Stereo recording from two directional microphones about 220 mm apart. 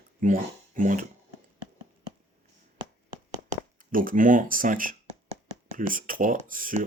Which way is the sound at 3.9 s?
40° right (ahead or behind).